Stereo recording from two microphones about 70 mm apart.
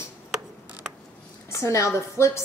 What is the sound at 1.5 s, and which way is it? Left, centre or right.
Speech, left.